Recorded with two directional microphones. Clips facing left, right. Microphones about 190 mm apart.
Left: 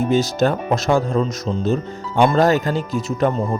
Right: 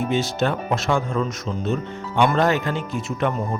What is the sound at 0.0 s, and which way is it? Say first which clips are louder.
Speech: left 5 dB; 40° left (ahead or behind).